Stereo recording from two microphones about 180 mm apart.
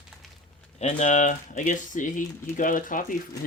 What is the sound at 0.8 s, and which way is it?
Speech, 40° left (ahead or behind).